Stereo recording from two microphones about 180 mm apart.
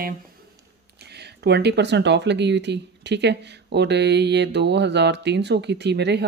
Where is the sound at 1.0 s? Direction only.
65° right (ahead or behind).